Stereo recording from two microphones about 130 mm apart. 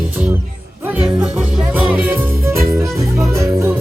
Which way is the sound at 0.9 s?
5° right (ahead or behind).